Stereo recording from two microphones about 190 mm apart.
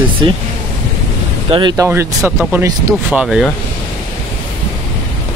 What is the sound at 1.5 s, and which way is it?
Speech, 25° right (ahead or behind).